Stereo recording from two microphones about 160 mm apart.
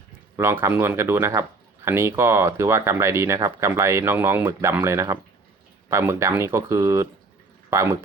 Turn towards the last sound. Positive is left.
turn(degrees=-15)  # may be behind; listen again after turning